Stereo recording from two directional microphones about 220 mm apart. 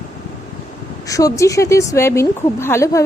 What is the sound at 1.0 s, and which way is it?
Speech, 15° left (ahead or behind).